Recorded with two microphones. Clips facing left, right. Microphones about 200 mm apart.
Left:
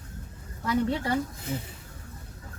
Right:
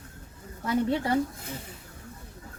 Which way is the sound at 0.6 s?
25° right (ahead or behind).